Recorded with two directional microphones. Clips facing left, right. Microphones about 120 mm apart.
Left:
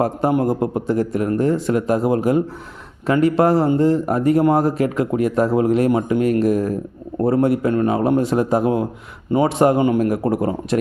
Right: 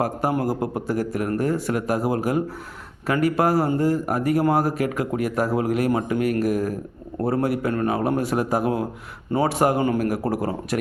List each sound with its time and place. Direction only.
0.0 s speech: 25° left (ahead or behind)